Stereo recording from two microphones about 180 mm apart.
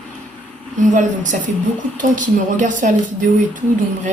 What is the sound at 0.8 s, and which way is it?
A woman's voice, 45° right (ahead or behind).